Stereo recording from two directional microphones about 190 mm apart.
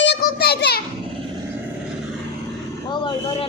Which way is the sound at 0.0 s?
60° left (ahead or behind).